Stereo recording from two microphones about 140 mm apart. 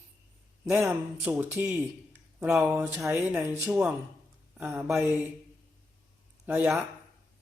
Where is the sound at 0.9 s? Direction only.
15° right (ahead or behind).